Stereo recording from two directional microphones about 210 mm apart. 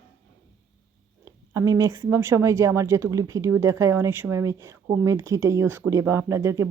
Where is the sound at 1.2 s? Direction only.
15° right (ahead or behind).